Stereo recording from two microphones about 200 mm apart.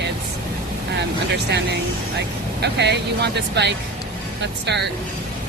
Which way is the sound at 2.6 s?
55° right (ahead or behind).